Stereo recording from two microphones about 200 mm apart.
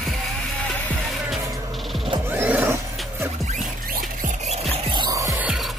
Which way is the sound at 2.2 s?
10° right (ahead or behind).